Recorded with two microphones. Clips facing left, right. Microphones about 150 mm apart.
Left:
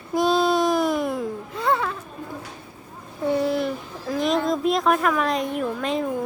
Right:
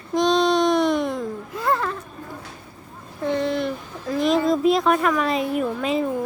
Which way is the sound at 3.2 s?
10° left (ahead or behind).